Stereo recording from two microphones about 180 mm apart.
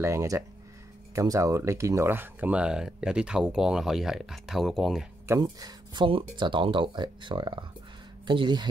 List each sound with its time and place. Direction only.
0.0 s speech: 15° right (ahead or behind)
5.3 s speech: 20° right (ahead or behind)